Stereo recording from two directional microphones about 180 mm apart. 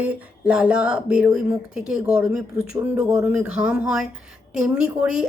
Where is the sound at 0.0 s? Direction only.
5° right (ahead or behind).